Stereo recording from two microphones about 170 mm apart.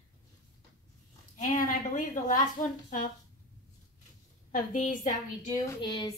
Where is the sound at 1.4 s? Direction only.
50° left (ahead or behind).